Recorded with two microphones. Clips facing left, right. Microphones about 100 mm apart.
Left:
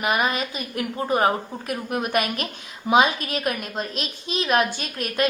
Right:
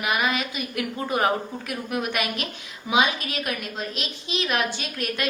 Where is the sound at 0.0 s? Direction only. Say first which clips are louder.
Left 2 dB; 40° left (ahead or behind).